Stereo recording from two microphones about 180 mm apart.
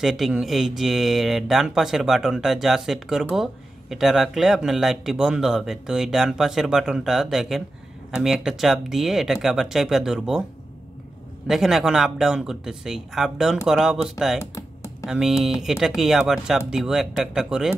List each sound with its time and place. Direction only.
0.0 s speech: centre (ahead or behind)
11.4 s speech: centre (ahead or behind)
14.4 s computer keyboard: 15° left (ahead or behind)
15.0 s speech: 5° right (ahead or behind)